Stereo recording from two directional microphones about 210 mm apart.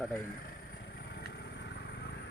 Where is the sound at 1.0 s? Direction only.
50° left (ahead or behind).